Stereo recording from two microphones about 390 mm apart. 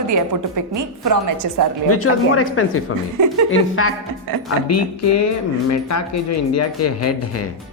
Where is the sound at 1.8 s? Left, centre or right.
Left.